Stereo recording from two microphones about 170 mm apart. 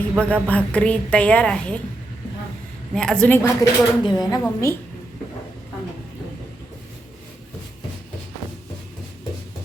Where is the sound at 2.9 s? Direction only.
5° left (ahead or behind).